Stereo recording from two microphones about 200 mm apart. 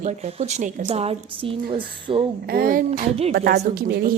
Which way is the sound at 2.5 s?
45° right (ahead or behind).